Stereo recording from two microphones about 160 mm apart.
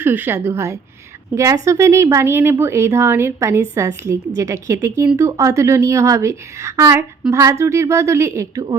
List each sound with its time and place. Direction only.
0.0 s speech: 15° right (ahead or behind)